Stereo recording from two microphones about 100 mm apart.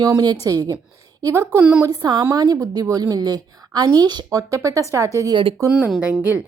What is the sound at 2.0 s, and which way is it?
A woman's voice, 45° right (ahead or behind).